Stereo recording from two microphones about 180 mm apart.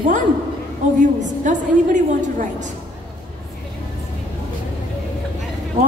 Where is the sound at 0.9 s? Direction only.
45° right (ahead or behind).